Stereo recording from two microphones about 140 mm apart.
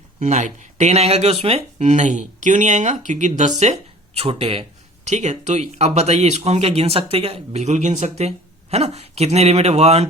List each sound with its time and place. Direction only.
0.2 s speech: 60° right (ahead or behind); by 4.6 s 45° right (ahead or behind)
5.0 s speech: 55° right (ahead or behind)